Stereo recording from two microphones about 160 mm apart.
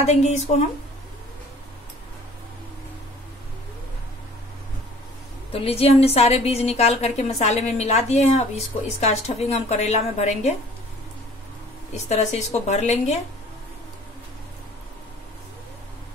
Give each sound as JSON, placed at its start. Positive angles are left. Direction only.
{"t": 0.0, "sound": "a woman's voice", "side_deg": 45}
{"t": 5.5, "sound": "a woman's voice", "side_deg": 35}
{"t": 12.1, "sound": "a woman's voice", "side_deg": 45}